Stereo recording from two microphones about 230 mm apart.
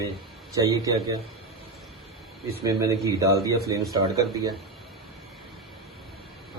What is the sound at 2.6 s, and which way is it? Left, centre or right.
A man's voice, centre.